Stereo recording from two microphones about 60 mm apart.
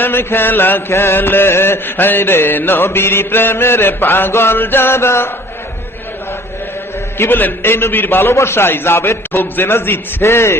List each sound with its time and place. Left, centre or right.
0.0 s chant: left
7.2 s a man's voice: left